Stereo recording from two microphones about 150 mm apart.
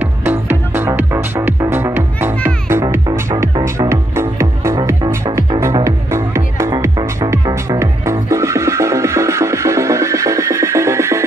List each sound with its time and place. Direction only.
0.0 s music: 15° right (ahead or behind)